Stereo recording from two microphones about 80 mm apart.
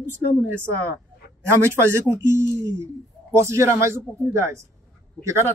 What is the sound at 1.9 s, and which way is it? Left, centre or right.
Speech, right.